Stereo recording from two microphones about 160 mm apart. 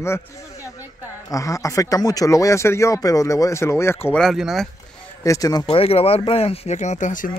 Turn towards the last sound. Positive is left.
turn(degrees=55)  # may be behind; listen again after turning